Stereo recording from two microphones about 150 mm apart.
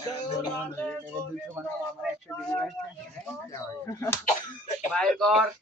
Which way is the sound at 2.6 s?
Centre (ahead or behind).